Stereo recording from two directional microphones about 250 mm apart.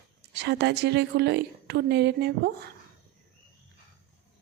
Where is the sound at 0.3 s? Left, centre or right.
Right.